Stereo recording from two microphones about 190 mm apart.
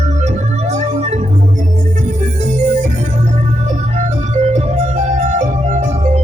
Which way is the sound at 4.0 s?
40° right (ahead or behind).